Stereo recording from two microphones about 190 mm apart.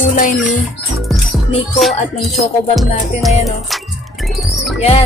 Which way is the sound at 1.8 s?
Centre (ahead or behind).